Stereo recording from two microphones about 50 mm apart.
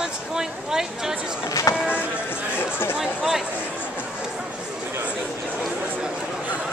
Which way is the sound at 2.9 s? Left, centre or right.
Centre.